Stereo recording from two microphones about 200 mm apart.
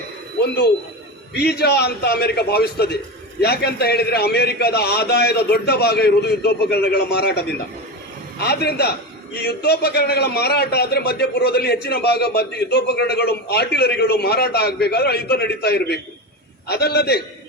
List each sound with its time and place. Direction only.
0.4 s a man's voice: 55° left (ahead or behind)